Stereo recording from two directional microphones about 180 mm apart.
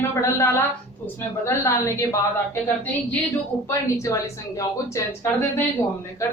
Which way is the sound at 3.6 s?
15° left (ahead or behind).